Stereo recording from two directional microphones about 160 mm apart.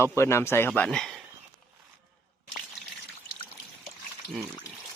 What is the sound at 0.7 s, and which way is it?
Speech, 5° left (ahead or behind).